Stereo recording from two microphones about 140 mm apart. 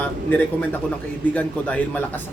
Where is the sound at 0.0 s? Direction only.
10° left (ahead or behind).